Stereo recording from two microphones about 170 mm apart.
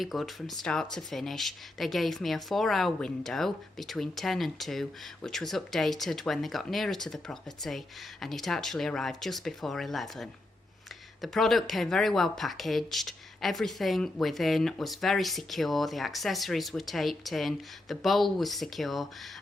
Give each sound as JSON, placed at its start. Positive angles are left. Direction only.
{"t": 0.0, "sound": "speech", "side_deg": 0}